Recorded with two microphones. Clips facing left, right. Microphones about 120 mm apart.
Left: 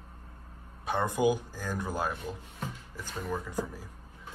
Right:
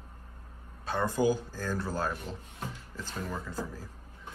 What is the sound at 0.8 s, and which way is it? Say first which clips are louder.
Speech: left 1 dB; 20° left (ahead or behind).